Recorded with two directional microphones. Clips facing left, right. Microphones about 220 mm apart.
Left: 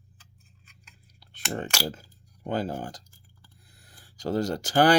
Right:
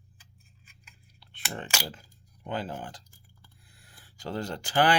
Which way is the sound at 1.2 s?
40° left (ahead or behind).